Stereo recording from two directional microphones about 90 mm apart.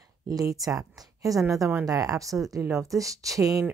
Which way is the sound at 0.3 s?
40° right (ahead or behind).